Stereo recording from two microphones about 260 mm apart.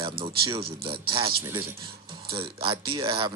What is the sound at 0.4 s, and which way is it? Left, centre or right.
Speech, centre.